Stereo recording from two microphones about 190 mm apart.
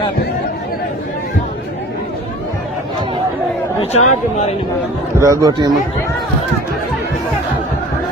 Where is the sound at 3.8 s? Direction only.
35° left (ahead or behind).